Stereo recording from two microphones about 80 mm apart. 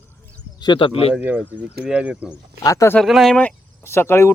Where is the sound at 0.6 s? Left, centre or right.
Left.